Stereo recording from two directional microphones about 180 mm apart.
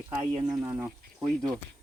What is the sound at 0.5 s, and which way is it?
Speech, 15° right (ahead or behind).